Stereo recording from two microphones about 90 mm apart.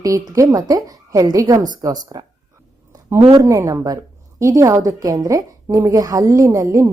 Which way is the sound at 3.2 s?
90° right.